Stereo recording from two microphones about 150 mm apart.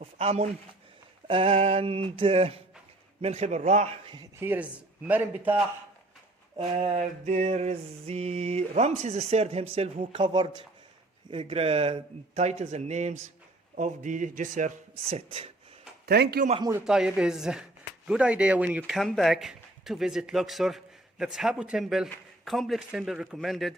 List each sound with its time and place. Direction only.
0.2 s mantra: 45° right (ahead or behind)
1.3 s a sound: 40° right (ahead or behind)
3.2 s mantra: 45° right (ahead or behind)
4.0 s a sound: 30° right (ahead or behind)
4.4 s a man's voice: 15° right (ahead or behind)
6.6 s mantra: 40° right (ahead or behind)
9.7 s a sound: 40° right (ahead or behind)
11.3 s mantra: 40° right (ahead or behind)
13.7 s speech: 55° right (ahead or behind)
15.1 s a sound: 40° right (ahead or behind)
16.0 s a man's voice: 90° right
16.8 s speech: 5° right (ahead or behind)